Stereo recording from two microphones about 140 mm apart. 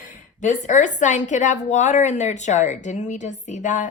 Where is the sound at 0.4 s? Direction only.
60° left (ahead or behind).